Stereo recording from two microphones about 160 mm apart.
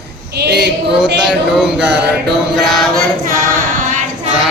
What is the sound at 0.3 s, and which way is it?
Speech, 90° right.